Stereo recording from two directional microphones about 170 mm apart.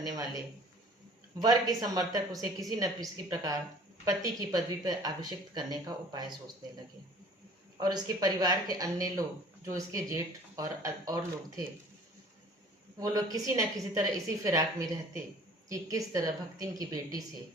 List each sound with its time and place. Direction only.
1.4 s a woman's voice: 20° right (ahead or behind)
7.8 s a woman's voice: 25° right (ahead or behind)
13.0 s a woman's voice: 20° right (ahead or behind)
15.7 s a woman's voice: 20° right (ahead or behind)